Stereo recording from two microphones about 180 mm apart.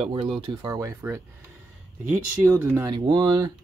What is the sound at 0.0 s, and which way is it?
Speech, 30° right (ahead or behind).